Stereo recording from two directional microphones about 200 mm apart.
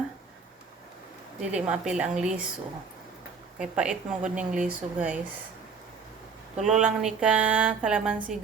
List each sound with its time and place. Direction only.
1.4 s speech: 5° right (ahead or behind)
3.6 s speech: 5° right (ahead or behind)
6.8 s speech: 5° right (ahead or behind)